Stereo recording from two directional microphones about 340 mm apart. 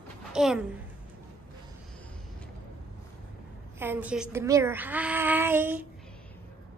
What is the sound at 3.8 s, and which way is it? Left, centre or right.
Speech, centre.